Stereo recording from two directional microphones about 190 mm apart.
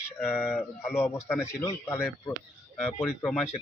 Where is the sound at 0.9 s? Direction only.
10° left (ahead or behind).